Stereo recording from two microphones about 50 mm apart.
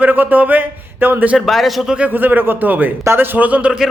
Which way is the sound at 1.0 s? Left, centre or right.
Right.